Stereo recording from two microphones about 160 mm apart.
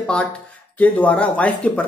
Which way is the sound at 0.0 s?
5° left (ahead or behind).